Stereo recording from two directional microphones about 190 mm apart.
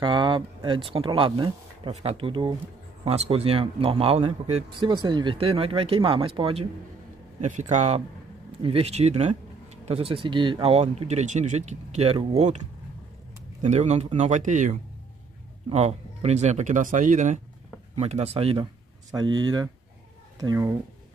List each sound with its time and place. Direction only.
0.0 s speech: 25° right (ahead or behind)
7.3 s speech: 40° right (ahead or behind)
13.6 s speech: 40° right (ahead or behind); by 20.7 s 15° right (ahead or behind)